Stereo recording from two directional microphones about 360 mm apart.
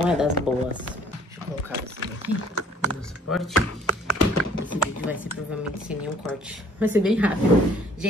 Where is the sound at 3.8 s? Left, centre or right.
Left.